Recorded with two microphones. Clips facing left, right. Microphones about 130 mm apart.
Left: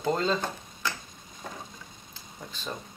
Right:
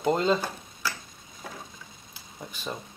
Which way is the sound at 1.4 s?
5° right (ahead or behind).